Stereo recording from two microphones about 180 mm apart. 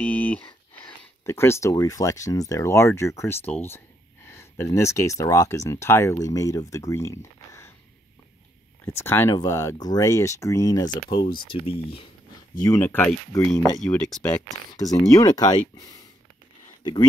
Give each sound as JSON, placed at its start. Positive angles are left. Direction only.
{"t": 0.0, "sound": "a sound", "side_deg": 10}
{"t": 1.2, "sound": "speech", "side_deg": 15}
{"t": 8.8, "sound": "speech", "side_deg": 15}
{"t": 12.6, "sound": "speech", "side_deg": 15}
{"t": 14.7, "sound": "speech", "side_deg": 20}